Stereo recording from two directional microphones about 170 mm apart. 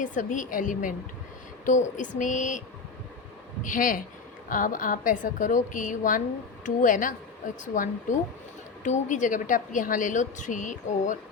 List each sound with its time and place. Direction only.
0.0 s a woman's voice: 50° left (ahead or behind)
8.8 s a woman's voice: 45° left (ahead or behind)